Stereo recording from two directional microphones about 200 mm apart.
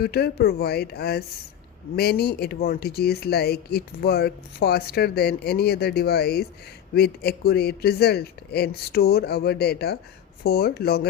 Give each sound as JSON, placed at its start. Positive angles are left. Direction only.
{"t": 0.0, "sound": "speech", "side_deg": 50}